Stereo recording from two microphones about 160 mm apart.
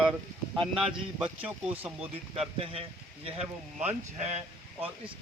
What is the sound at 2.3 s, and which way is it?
Speech, 40° right (ahead or behind).